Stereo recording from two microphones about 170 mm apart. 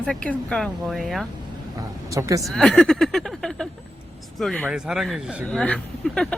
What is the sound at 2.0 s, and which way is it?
Speech, 20° right (ahead or behind).